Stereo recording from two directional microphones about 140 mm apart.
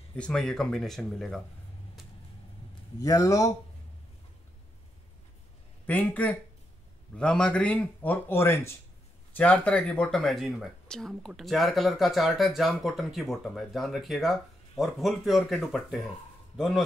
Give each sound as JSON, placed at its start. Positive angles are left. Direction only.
{"t": 0.1, "sound": "speech", "side_deg": 5}
{"t": 3.0, "sound": "speech", "side_deg": 25}
{"t": 5.9, "sound": "a man's voice", "side_deg": 10}